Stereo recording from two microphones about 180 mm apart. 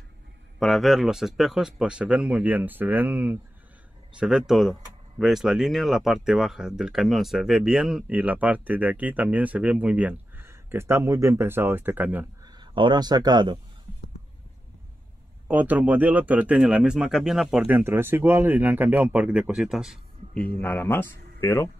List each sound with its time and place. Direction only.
0.6 s speech: centre (ahead or behind)
12.4 s speech: 25° right (ahead or behind)
15.4 s speech: 10° right (ahead or behind)
20.6 s speech: 10° left (ahead or behind)